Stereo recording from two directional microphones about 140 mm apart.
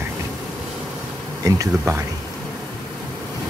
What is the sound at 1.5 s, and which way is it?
Speech, 25° right (ahead or behind).